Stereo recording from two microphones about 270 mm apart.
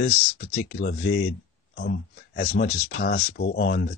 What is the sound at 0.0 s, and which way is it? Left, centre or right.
Speech, left.